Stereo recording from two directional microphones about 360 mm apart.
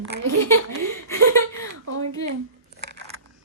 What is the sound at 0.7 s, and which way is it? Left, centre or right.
Speech, right.